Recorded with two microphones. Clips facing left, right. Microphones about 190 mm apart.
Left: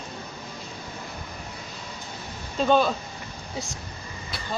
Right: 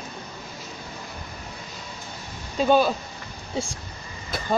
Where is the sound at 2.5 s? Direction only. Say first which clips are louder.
Right 2 dB; 5° right (ahead or behind).